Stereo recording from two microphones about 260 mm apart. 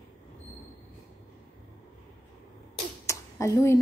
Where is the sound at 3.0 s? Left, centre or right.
Centre.